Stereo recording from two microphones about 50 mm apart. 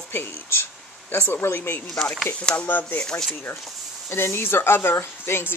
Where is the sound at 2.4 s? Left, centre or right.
Left.